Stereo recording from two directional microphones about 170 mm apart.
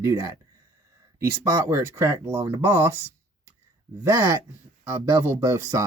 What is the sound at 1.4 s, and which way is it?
Speech, 15° right (ahead or behind).